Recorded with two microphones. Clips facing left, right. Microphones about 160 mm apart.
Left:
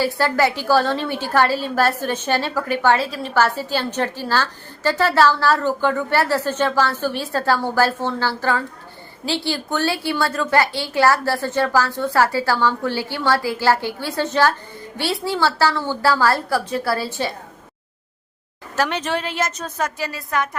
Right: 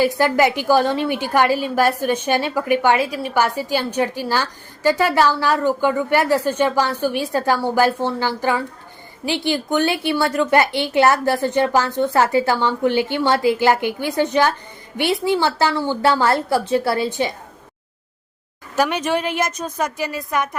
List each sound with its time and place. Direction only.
0.0 s a woman's voice: 15° right (ahead or behind)
18.8 s a woman's voice: 10° right (ahead or behind)